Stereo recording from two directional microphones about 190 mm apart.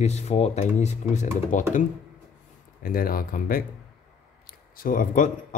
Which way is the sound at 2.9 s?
50° left (ahead or behind).